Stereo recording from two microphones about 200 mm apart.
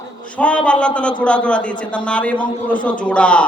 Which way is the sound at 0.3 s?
5° left (ahead or behind).